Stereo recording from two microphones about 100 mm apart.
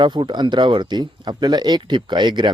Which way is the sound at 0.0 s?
50° right (ahead or behind).